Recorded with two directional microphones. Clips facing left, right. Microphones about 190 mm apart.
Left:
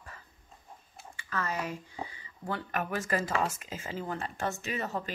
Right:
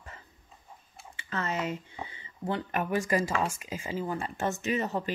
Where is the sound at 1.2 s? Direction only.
25° right (ahead or behind).